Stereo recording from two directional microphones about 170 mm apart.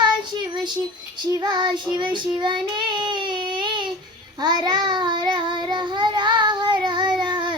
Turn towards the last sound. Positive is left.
turn(degrees=-25)  # may be behind; listen again after turning